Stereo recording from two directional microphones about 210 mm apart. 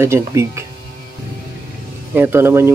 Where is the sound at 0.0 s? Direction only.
15° right (ahead or behind).